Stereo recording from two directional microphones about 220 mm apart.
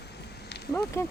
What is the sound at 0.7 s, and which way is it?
Speech, 10° left (ahead or behind).